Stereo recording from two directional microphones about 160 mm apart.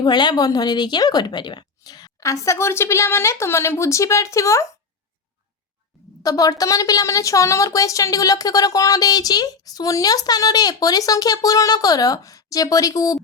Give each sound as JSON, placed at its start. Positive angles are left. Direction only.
{"t": 0.0, "sound": "speech", "side_deg": 25}
{"t": 6.2, "sound": "speech", "side_deg": 20}